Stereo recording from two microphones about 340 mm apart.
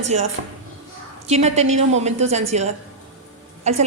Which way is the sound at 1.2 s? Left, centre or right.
Centre.